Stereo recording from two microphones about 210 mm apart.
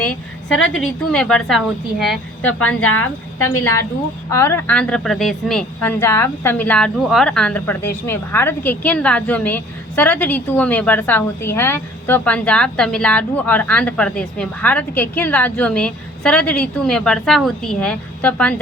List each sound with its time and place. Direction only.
0.0 s a woman's voice: 5° left (ahead or behind)
2.4 s a woman's voice: 85° left
4.3 s a woman's voice: 10° left (ahead or behind)